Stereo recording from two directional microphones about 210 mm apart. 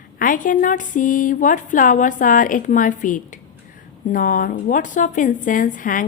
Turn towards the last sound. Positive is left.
turn(degrees=40)  # may be behind; listen again after turning